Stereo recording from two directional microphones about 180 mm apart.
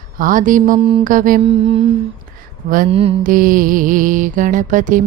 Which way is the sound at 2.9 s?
30° right (ahead or behind).